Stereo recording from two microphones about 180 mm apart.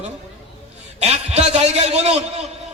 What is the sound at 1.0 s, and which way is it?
A man's voice, 35° right (ahead or behind).